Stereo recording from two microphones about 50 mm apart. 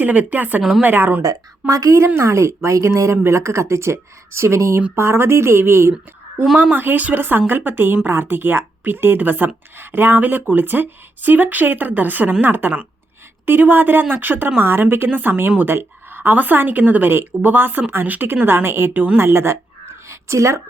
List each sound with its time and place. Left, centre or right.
0.0 s speech: right
1.6 s a woman's voice: right
2.2 s a woman's voice: right
6.7 s speech: right
18.4 s a woman's voice: right
20.1 s a sound: right